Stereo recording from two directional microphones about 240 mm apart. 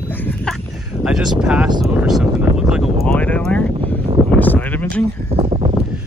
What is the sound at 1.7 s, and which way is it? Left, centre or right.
Speech, centre.